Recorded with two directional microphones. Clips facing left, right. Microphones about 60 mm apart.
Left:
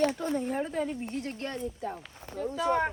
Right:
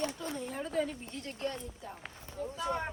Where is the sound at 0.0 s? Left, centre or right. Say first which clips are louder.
Left 9 dB; left.